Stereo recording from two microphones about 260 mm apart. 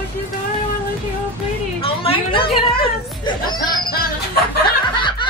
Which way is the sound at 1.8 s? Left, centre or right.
Left.